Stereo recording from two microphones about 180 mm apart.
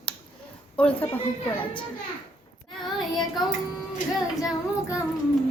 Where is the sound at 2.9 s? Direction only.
Centre (ahead or behind).